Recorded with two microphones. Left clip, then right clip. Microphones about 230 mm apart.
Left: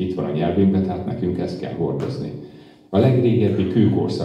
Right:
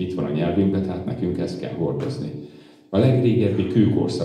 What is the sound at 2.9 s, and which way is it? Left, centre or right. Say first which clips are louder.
Speech: left 2 dB; right.